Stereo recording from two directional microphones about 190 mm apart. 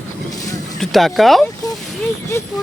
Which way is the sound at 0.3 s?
20° left (ahead or behind).